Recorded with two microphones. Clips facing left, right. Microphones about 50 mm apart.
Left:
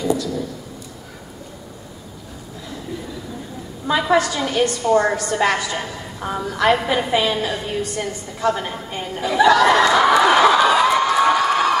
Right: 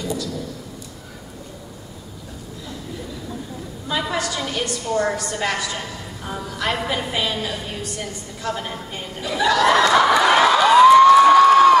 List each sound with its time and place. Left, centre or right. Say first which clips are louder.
0.0 s a sound: left 6 dB; centre
4.2 s a woman's voice: left 5 dB; centre
6.2 s a woman's voice: left 7 dB; left
8.4 s chuckle: left 6 dB; centre